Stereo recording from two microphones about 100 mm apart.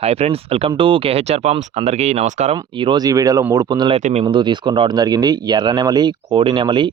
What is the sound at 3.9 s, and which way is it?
Speech, 90° right.